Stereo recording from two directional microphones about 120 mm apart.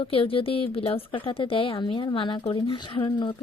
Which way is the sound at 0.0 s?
50° left (ahead or behind).